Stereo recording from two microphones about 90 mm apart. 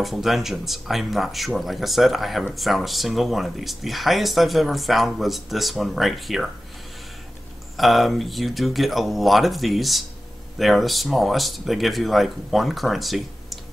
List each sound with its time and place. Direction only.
0.0 s speech: centre (ahead or behind)
7.7 s speech: centre (ahead or behind)